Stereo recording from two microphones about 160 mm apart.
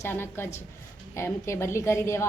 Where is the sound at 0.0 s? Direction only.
15° left (ahead or behind).